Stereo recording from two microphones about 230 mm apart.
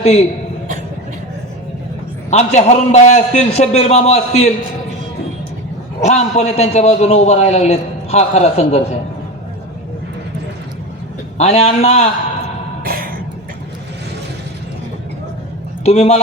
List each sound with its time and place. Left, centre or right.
0.0 s a man's voice: left
2.3 s a man's voice: left
6.0 s a man's voice: left
11.3 s a man's voice: left
12.8 s a sound: right
15.8 s speech: left